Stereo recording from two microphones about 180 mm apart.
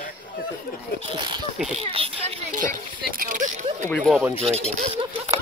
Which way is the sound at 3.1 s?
50° right (ahead or behind).